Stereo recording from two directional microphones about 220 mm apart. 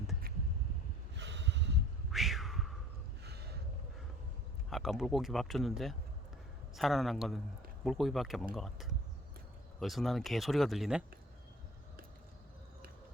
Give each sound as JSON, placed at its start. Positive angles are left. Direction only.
{"t": 1.1, "sound": "snort", "side_deg": -55}
{"t": 2.0, "sound": "a sound", "side_deg": 0}
{"t": 4.7, "sound": "speech", "side_deg": 0}